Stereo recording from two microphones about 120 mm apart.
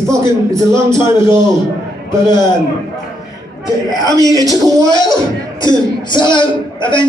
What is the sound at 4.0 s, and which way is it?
A man's voice, 30° right (ahead or behind).